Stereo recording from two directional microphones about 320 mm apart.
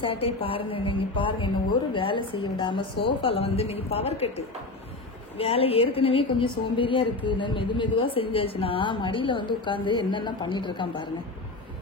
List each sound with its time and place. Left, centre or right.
0.0 s a woman's voice: centre
5.4 s a woman's voice: centre